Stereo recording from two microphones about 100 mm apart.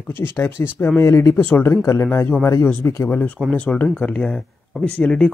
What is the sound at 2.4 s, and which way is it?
Speech, 30° left (ahead or behind).